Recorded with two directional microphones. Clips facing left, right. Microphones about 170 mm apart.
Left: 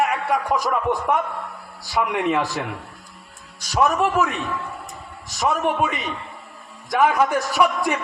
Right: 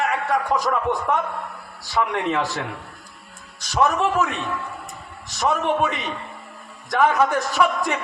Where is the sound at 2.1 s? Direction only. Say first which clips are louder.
Left 2 dB; 15° left (ahead or behind).